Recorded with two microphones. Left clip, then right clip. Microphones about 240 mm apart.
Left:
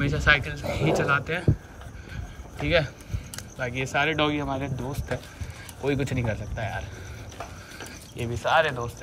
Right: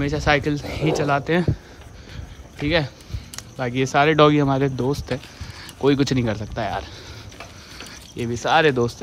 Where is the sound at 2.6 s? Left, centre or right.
Centre.